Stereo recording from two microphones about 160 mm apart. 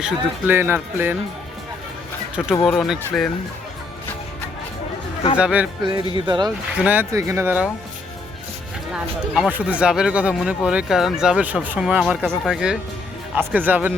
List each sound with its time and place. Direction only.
0.0 s speech: 15° right (ahead or behind)
2.6 s speech: centre (ahead or behind)
5.4 s speech: 5° right (ahead or behind)
6.2 s speech: 30° right (ahead or behind)
6.7 s speech: 10° right (ahead or behind)
8.9 s speech: 5° right (ahead or behind)
12.2 s speech: 5° left (ahead or behind)